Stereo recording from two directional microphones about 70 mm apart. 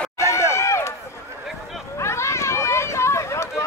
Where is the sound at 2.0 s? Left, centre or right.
Left.